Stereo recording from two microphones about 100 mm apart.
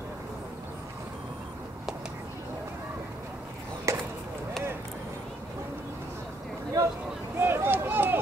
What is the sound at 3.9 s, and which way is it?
Chop, 30° right (ahead or behind).